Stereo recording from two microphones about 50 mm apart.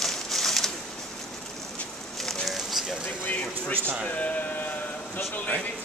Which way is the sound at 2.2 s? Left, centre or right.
Centre.